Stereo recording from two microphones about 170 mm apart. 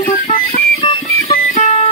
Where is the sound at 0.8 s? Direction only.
40° left (ahead or behind).